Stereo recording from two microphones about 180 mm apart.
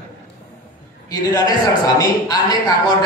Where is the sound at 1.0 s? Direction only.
20° left (ahead or behind).